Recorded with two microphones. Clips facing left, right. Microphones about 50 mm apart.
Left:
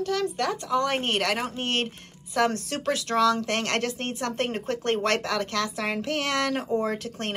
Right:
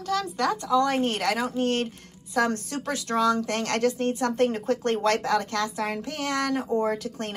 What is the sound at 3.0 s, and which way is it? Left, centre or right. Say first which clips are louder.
Speech: even; left.